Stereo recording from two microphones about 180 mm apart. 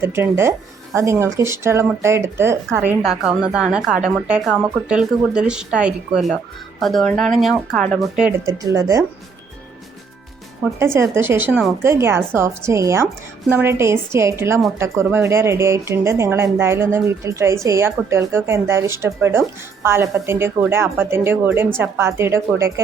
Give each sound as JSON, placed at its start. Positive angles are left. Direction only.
{"t": 0.0, "sound": "speech", "side_deg": -15}
{"t": 8.4, "sound": "speech", "side_deg": -20}
{"t": 10.8, "sound": "speech", "side_deg": -15}